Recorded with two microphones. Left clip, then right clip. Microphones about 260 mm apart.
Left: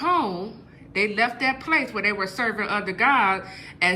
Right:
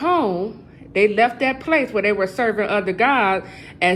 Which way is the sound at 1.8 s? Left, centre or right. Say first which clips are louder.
Right 5 dB; centre.